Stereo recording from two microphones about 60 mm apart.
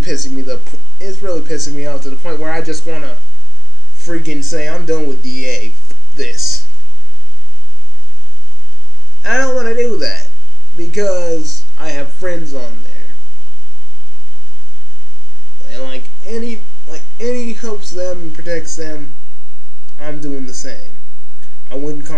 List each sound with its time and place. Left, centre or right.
0.0 s speech: centre
4.2 s speech: centre
9.2 s speech: centre
12.7 s a sound: centre
15.6 s speech: centre